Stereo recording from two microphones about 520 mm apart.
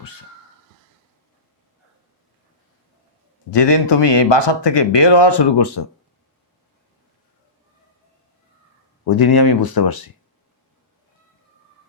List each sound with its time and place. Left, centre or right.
3.5 s speech: left
9.0 s speech: left